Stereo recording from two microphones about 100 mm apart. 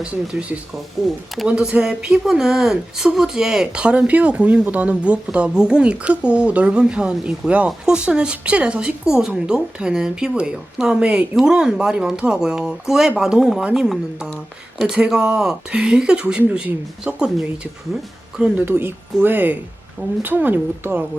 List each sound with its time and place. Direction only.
0.0 s speech: 10° right (ahead or behind)
18.6 s speech: 20° right (ahead or behind)